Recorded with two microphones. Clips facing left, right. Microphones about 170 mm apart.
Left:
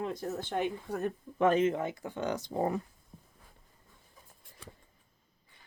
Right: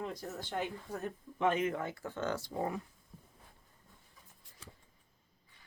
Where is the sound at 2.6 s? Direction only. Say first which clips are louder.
Left 7 dB; 40° left (ahead or behind).